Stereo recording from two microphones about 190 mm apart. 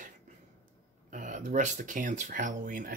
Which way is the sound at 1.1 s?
40° right (ahead or behind).